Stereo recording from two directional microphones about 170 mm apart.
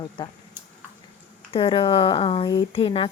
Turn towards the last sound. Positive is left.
turn(degrees=30)  # may be behind; listen again after turning